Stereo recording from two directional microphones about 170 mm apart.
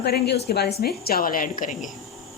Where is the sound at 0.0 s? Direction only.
75° left (ahead or behind); by 1.8 s 50° left (ahead or behind).